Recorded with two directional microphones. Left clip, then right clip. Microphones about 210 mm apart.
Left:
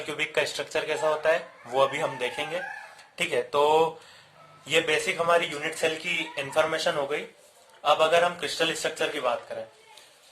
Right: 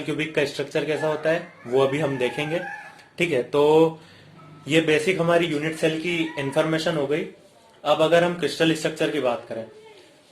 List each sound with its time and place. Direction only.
0.3 s speech: 35° left (ahead or behind)